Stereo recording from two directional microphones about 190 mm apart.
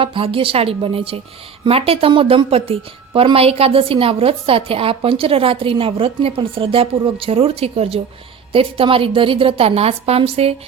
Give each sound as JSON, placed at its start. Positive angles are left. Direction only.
{"t": 0.0, "sound": "a woman's voice", "side_deg": -25}